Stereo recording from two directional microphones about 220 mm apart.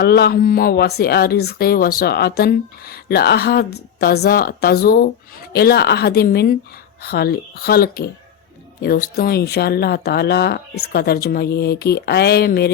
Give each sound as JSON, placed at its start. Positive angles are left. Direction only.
{"t": 0.0, "sound": "speech", "side_deg": 45}